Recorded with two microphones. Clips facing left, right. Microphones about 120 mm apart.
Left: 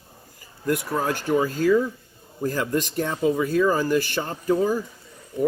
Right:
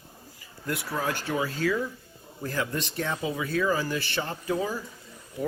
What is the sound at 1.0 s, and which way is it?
Speech, 45° left (ahead or behind).